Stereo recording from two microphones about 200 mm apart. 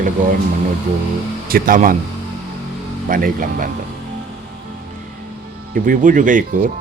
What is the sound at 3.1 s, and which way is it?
Speech, 45° right (ahead or behind).